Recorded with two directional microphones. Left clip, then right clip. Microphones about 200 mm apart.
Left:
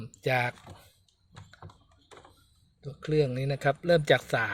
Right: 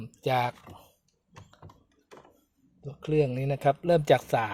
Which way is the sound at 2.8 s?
10° right (ahead or behind).